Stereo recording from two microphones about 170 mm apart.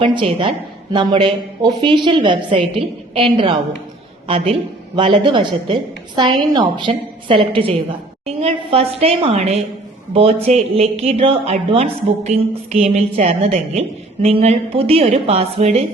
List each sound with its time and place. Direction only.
0.0 s a woman's voice: 30° right (ahead or behind)